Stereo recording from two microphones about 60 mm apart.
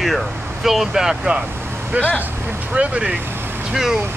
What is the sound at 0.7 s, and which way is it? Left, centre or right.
Speech, centre.